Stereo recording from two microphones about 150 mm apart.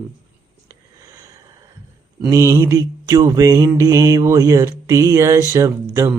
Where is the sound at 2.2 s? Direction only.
20° right (ahead or behind).